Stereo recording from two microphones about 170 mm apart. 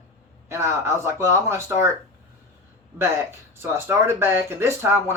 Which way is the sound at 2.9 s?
15° right (ahead or behind).